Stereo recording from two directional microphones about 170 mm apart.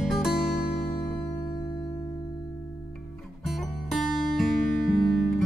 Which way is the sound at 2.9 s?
Centre (ahead or behind).